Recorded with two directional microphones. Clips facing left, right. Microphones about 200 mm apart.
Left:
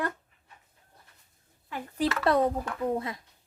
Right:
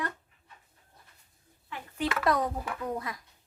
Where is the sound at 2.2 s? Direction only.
30° left (ahead or behind).